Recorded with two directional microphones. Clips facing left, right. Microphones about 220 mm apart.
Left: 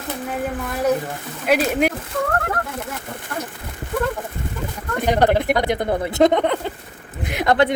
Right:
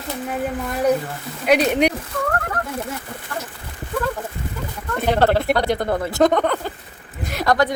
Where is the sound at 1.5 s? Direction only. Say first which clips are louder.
Right 2 dB; 5° left (ahead or behind).